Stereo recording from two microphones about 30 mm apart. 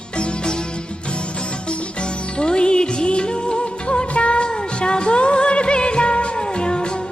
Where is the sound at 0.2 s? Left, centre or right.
Left.